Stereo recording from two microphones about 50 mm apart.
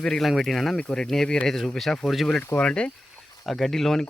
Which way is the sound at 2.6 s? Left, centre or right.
Left.